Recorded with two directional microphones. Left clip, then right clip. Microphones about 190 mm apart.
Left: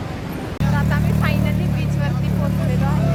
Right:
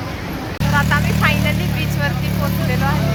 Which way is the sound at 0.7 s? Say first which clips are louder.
Right 8 dB; 20° right (ahead or behind).